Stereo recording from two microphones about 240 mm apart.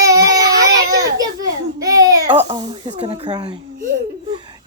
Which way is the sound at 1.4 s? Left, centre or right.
Centre.